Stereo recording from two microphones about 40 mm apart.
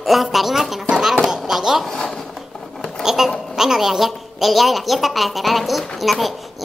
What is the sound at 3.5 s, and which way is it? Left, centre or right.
A woman's voice, centre.